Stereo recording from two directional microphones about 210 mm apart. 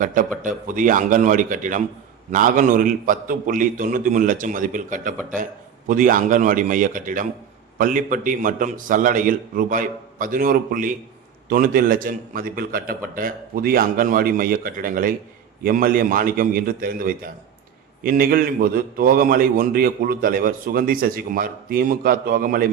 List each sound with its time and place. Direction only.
0.0 s a man's voice: 40° right (ahead or behind)